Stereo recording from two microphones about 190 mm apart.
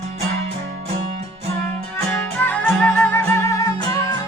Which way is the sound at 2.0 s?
5° left (ahead or behind).